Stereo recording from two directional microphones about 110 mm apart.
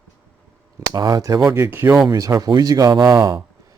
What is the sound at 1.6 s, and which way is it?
Speech, 20° right (ahead or behind).